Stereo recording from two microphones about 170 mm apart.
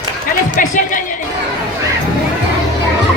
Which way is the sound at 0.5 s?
50° left (ahead or behind).